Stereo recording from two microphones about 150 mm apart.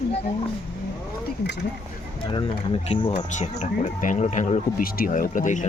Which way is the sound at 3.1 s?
50° left (ahead or behind).